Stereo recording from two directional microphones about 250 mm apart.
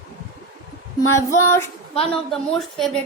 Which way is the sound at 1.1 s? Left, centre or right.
Centre.